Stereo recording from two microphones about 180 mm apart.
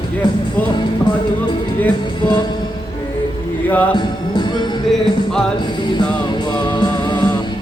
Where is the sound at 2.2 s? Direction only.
25° left (ahead or behind).